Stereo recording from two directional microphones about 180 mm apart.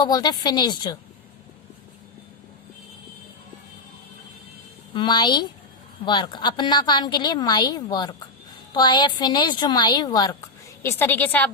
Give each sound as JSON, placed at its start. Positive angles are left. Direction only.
{"t": 0.0, "sound": "a woman's voice", "side_deg": 20}
{"t": 4.9, "sound": "a woman's voice", "side_deg": 25}